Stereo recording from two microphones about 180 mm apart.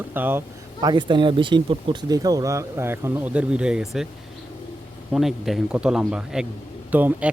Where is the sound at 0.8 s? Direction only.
25° right (ahead or behind); by 4.1 s centre (ahead or behind).